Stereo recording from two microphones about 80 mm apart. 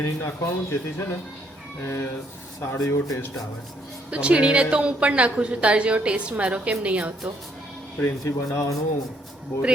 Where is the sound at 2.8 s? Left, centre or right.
Left.